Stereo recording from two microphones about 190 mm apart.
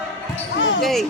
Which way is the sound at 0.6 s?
75° left (ahead or behind).